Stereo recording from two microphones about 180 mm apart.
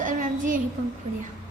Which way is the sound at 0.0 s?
45° right (ahead or behind).